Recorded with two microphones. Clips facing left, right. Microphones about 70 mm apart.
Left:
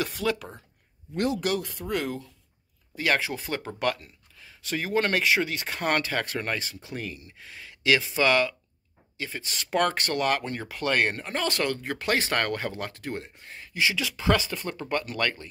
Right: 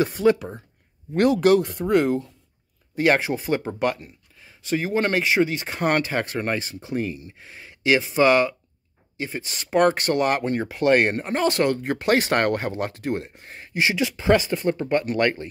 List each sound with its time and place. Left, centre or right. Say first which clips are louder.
0.0 s speech: right 9 dB; right
1.1 s speech: right 10 dB; right
1.6 s speech: right 10 dB; right
3.3 s speech: right 8 dB; centre; by 14.1 s right
14.1 s speech: right 6 dB; right